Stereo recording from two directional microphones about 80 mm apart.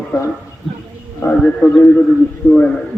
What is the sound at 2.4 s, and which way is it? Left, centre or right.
Speech, left.